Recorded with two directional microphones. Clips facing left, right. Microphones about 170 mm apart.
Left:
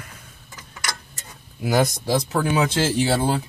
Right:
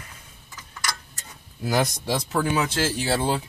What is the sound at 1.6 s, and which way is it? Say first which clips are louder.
Speech: left 3 dB; 5° left (ahead or behind).